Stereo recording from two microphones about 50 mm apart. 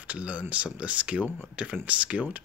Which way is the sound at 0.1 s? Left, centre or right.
Right.